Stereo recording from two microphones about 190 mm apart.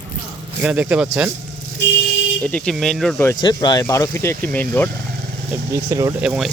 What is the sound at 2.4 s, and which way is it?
Speech, 5° left (ahead or behind).